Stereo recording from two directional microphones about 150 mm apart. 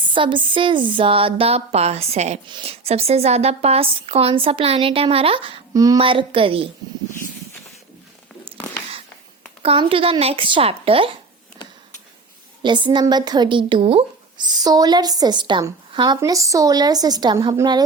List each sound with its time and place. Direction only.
0.1 s a woman's voice: 35° right (ahead or behind)
5.7 s speech: 25° right (ahead or behind)
6.0 s a woman's voice: 35° right (ahead or behind)
8.5 s a sound: 5° left (ahead or behind)
9.6 s a woman's voice: 35° right (ahead or behind)
12.6 s speech: 30° right (ahead or behind)